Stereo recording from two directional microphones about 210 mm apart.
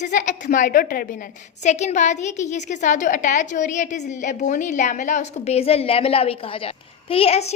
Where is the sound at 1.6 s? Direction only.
35° left (ahead or behind).